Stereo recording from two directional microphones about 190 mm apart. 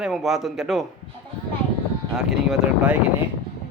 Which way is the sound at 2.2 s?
Centre (ahead or behind).